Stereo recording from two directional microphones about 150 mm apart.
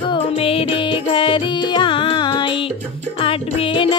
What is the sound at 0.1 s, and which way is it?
Music, 40° left (ahead or behind).